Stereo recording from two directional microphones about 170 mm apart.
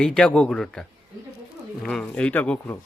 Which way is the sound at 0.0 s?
5° left (ahead or behind).